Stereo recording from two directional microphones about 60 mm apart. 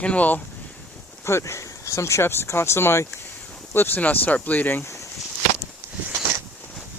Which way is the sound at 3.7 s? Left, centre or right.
Left.